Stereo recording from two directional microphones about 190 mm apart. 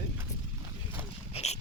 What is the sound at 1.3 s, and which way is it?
Dog, 35° left (ahead or behind).